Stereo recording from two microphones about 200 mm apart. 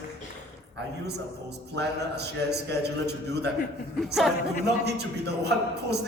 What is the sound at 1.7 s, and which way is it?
A man's voice, 55° right (ahead or behind).